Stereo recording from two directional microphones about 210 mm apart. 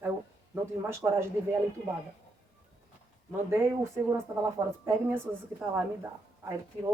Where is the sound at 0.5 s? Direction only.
10° right (ahead or behind).